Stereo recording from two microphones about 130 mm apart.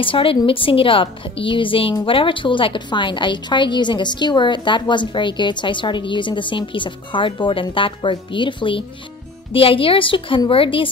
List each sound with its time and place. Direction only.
0.0 s a woman's voice: 45° left (ahead or behind)